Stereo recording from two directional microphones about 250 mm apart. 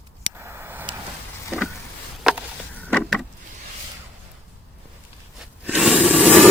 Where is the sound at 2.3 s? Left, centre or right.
Centre.